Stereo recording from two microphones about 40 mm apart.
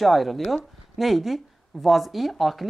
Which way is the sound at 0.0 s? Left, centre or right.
Centre.